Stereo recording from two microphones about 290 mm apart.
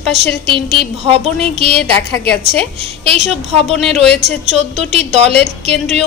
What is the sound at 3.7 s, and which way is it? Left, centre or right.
Speech, centre.